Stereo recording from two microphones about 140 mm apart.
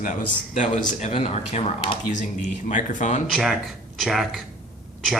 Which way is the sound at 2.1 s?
60° left (ahead or behind).